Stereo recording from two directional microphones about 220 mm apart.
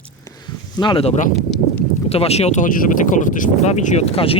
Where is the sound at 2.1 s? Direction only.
25° left (ahead or behind).